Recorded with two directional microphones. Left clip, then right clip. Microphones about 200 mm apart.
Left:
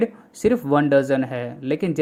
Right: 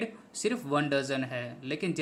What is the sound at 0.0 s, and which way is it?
Speech, 30° left (ahead or behind).